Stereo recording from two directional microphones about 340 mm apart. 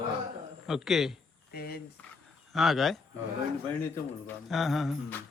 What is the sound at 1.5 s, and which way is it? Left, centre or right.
Speech, left.